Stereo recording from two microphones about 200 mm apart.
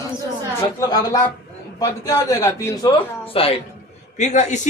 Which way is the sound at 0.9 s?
20° left (ahead or behind).